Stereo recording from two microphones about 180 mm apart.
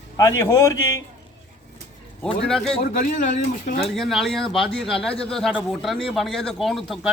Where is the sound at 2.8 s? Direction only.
50° left (ahead or behind).